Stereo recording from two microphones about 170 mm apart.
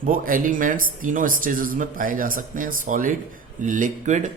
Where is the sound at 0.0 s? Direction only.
55° right (ahead or behind).